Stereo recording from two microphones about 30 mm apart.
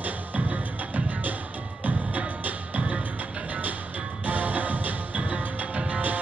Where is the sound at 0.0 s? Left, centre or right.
Right.